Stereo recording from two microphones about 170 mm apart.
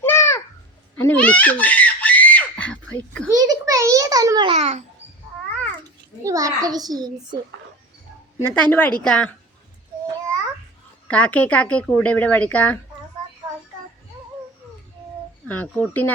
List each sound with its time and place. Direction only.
0.0 s babbling: 15° left (ahead or behind)
1.0 s screaming: 10° left (ahead or behind)
3.2 s a sound: 20° right (ahead or behind)
4.5 s a child's voice: 40° right (ahead or behind)
6.2 s a child's voice: 20° right (ahead or behind)
8.4 s a woman's voice: 10° left (ahead or behind)
11.1 s speech: 5° left (ahead or behind)
15.4 s speech: 10° left (ahead or behind)